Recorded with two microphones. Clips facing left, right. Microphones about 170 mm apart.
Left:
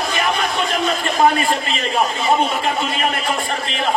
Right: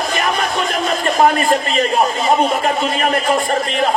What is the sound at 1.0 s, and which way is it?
A man's voice, 40° right (ahead or behind).